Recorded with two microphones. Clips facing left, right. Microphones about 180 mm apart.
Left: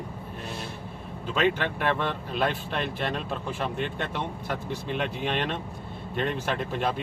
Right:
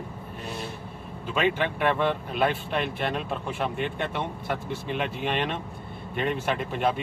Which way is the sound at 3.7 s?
55° right (ahead or behind).